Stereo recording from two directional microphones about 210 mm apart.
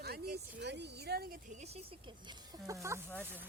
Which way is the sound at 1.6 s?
25° right (ahead or behind).